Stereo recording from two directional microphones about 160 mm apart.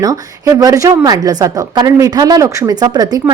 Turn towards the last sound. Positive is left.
turn(degrees=-25)  # may be behind; listen again after turning